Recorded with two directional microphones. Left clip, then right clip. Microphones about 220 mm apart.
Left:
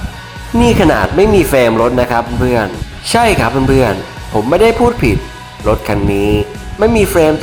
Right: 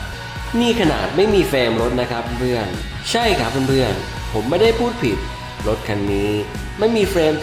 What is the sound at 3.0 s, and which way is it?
Music, 10° left (ahead or behind).